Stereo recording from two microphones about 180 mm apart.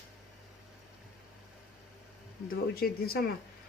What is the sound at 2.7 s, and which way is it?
Speech, 60° left (ahead or behind).